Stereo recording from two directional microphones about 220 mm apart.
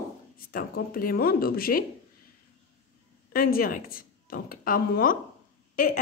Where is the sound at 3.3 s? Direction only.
40° left (ahead or behind).